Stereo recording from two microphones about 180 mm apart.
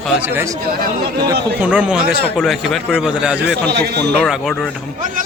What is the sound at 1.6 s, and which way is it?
A man's voice, 5° right (ahead or behind).